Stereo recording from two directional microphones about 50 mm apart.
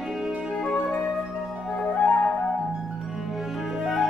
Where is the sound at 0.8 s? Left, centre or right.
Left.